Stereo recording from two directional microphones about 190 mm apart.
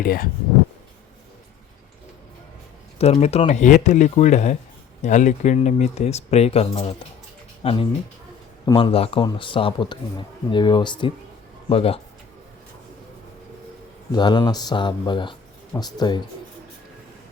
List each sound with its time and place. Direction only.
0.0 s speech: 50° left (ahead or behind)
3.0 s a man's voice: 35° left (ahead or behind)
14.1 s a man's voice: 25° left (ahead or behind)